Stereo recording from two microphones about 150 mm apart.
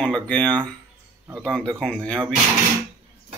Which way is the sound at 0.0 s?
5° left (ahead or behind).